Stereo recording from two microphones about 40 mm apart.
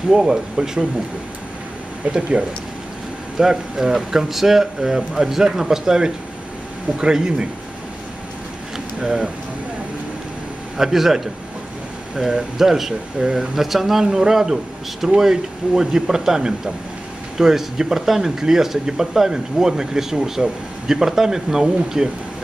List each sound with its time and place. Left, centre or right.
0.1 s speech: centre
2.0 s speech: right
3.3 s speech: centre
8.7 s a sound: centre
10.8 s speech: centre